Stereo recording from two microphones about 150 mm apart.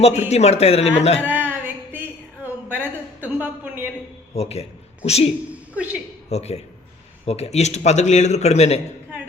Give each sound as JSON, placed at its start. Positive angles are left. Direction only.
{"t": 0.0, "sound": "speech", "side_deg": 50}
{"t": 1.2, "sound": "a sound", "side_deg": -10}
{"t": 4.4, "sound": "speech", "side_deg": 45}
{"t": 5.7, "sound": "a woman's voice", "side_deg": -10}
{"t": 6.2, "sound": "a man's voice", "side_deg": 45}